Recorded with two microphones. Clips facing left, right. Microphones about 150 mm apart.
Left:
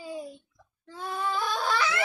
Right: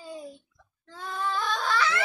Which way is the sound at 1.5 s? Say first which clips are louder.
Right 1 dB; 10° left (ahead or behind).